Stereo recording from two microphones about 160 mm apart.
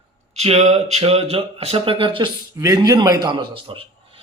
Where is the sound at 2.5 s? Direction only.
20° right (ahead or behind).